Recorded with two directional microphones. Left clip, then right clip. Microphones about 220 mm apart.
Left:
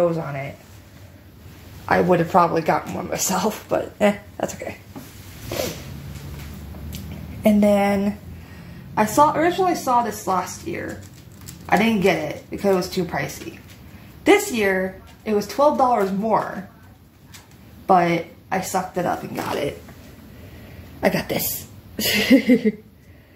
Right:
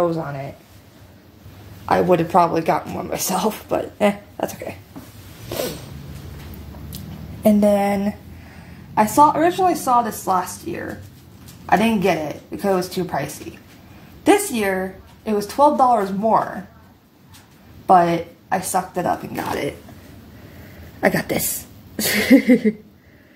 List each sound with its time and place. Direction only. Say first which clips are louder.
1.9 s speech: right 1 dB; 15° right (ahead or behind)
7.4 s speech: right 1 dB; 15° right (ahead or behind)
14.2 s speech: even; 15° right (ahead or behind)
17.8 s speech: right 3 dB; 15° right (ahead or behind)
21.0 s speech: right 2 dB; 15° right (ahead or behind)